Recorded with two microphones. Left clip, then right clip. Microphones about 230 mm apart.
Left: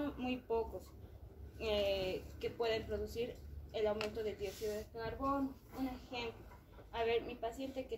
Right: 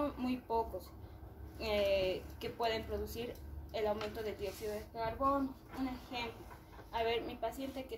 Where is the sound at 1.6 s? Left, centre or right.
Right.